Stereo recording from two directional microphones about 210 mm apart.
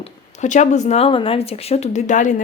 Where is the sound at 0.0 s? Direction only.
35° left (ahead or behind).